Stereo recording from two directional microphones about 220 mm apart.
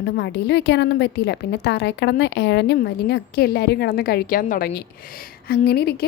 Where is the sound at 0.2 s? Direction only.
50° left (ahead or behind).